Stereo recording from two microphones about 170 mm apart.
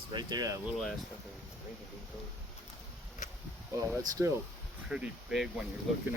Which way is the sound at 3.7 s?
20° right (ahead or behind).